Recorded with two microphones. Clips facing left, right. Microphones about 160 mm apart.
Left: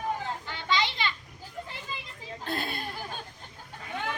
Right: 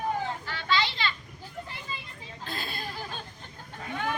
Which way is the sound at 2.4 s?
60° left (ahead or behind).